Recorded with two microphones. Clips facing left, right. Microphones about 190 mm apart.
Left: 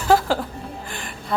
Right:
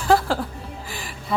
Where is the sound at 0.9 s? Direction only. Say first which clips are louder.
Left 1 dB; centre (ahead or behind).